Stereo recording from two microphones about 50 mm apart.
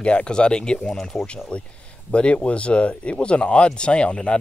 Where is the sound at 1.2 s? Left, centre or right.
Left.